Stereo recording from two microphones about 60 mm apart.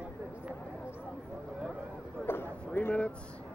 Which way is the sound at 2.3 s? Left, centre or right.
Left.